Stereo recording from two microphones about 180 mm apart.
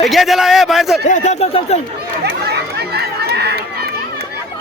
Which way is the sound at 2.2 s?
65° right (ahead or behind).